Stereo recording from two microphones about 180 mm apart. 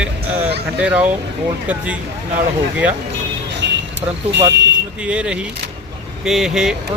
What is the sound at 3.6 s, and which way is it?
Vehicle, 75° right (ahead or behind).